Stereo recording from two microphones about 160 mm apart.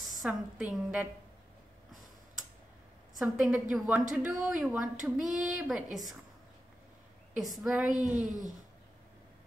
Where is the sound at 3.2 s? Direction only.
Centre (ahead or behind).